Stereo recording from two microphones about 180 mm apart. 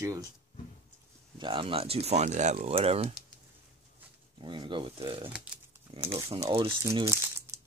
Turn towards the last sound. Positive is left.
turn(degrees=-15)  # may be behind; listen again after turning